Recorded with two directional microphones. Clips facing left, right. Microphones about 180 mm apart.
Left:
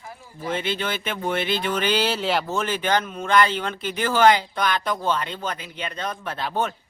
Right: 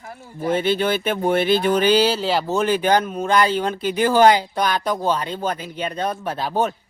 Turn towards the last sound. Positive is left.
turn(degrees=-35)  # may be behind; listen again after turning